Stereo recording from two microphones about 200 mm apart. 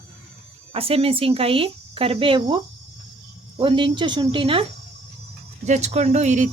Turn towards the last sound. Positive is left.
turn(degrees=-35)  # may be behind; listen again after turning